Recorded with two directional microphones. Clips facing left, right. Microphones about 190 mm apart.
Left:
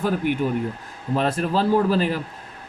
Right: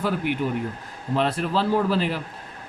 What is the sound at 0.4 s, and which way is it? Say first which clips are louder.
Speech: left 3 dB; 45° left (ahead or behind).